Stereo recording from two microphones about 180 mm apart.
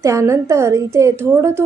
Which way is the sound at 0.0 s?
15° right (ahead or behind).